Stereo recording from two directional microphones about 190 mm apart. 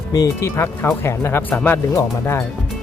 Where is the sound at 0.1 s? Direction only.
15° left (ahead or behind).